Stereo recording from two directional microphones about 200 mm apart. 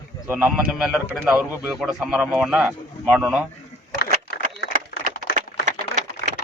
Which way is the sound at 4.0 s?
55° left (ahead or behind).